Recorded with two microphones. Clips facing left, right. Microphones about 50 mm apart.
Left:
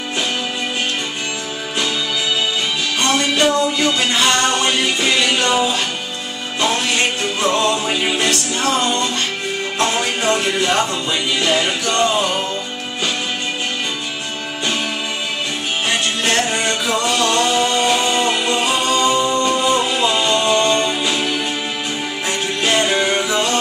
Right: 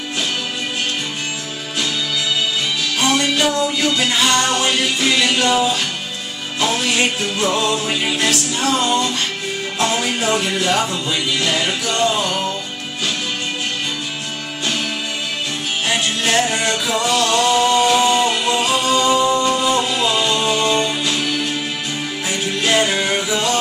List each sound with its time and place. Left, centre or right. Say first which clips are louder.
3.0 s music: left 1 dB; centre
15.9 s music: right 1 dB; centre
21.0 s music: left 1 dB; centre